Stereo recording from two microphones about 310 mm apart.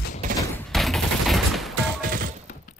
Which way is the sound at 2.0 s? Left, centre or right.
Right.